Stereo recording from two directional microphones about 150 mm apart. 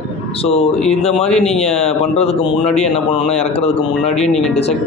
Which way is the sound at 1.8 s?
45° left (ahead or behind).